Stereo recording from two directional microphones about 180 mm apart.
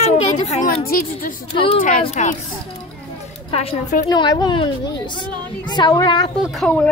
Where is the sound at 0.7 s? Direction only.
55° left (ahead or behind).